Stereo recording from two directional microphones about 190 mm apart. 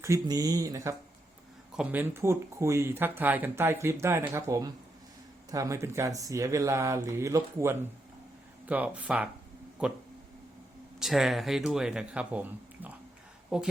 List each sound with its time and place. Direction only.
0.0 s speech: 15° right (ahead or behind)
1.7 s speech: 5° right (ahead or behind)
11.0 s speech: centre (ahead or behind)